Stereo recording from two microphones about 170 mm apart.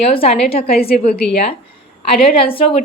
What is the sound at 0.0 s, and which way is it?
Speech, 35° left (ahead or behind).